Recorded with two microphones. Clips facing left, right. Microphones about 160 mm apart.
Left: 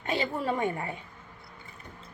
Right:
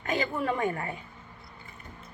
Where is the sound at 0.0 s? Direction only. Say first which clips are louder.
Right 1 dB; 30° left (ahead or behind).